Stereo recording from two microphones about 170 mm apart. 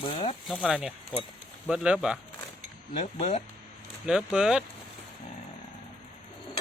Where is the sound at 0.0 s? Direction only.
35° left (ahead or behind).